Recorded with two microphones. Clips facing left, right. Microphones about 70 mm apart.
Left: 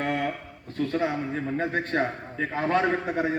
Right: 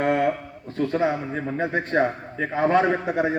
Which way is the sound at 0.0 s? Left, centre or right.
Right.